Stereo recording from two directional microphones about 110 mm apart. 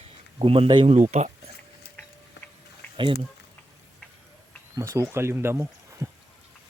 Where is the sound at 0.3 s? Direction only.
55° right (ahead or behind).